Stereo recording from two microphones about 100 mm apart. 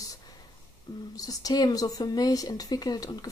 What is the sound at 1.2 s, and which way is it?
A woman's voice, 40° left (ahead or behind).